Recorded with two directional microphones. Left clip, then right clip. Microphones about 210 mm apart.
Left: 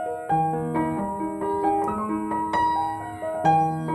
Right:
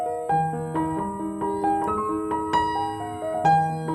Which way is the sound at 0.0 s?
Centre (ahead or behind).